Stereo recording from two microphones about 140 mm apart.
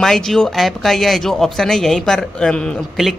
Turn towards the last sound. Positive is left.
turn(degrees=0)  # may be behind; listen again after turning